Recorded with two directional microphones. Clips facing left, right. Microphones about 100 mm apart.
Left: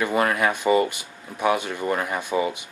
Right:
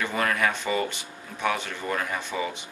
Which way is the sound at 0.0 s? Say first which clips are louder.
Left 4 dB; 15° left (ahead or behind).